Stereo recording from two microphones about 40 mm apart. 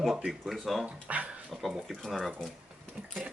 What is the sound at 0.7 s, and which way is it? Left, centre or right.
Speech, centre.